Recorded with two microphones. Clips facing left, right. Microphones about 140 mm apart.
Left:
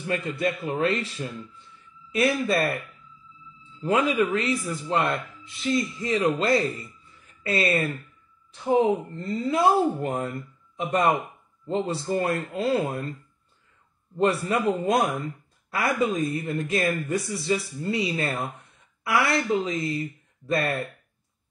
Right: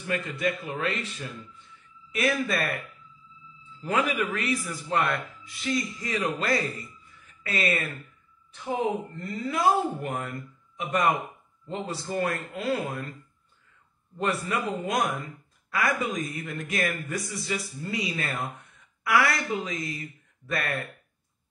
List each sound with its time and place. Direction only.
0.0 s speech: 35° left (ahead or behind)
3.8 s speech: 25° left (ahead or behind)
14.1 s speech: 30° left (ahead or behind)